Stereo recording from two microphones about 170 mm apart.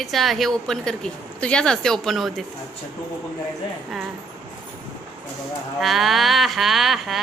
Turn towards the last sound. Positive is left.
turn(degrees=0)  # may be behind; listen again after turning